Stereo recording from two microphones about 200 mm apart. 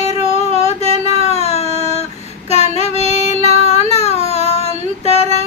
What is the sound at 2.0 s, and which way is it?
Female singing, 35° left (ahead or behind).